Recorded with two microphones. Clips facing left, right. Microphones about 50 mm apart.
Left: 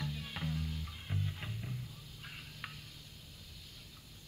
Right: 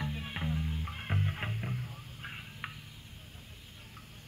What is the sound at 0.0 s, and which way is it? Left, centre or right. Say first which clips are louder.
Music: right 4 dB; right.